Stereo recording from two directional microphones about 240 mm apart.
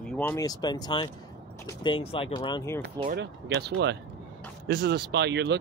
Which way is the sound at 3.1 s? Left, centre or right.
Right.